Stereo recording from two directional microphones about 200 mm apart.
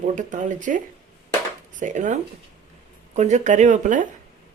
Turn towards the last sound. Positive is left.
turn(degrees=-40)  # may be behind; listen again after turning